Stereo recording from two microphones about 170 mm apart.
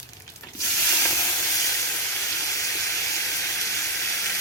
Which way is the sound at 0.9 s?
10° left (ahead or behind).